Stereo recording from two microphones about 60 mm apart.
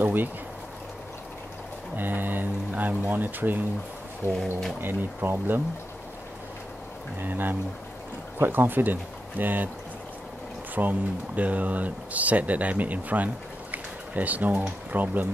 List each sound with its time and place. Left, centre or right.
0.0 s a sound: right
2.0 s speech: right
4.3 s speech: centre
4.7 s speech: right
7.2 s speech: right
10.7 s speech: right